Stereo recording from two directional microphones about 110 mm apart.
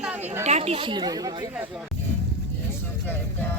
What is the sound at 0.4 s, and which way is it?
Speech, 85° right.